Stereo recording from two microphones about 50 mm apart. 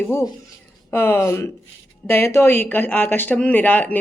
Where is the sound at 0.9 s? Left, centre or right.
Left.